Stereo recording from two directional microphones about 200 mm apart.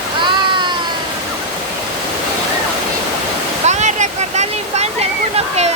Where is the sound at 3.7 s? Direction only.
35° right (ahead or behind).